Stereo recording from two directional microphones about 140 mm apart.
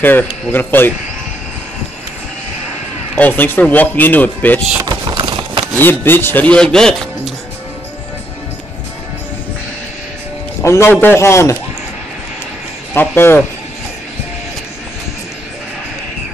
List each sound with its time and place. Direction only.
0.0 s speech: 15° left (ahead or behind)
3.2 s speech: 15° left (ahead or behind)
4.8 s a sound: 30° right (ahead or behind)
5.8 s speech: 15° left (ahead or behind)
10.6 s a man's voice: 20° left (ahead or behind)
12.9 s speech: 15° left (ahead or behind)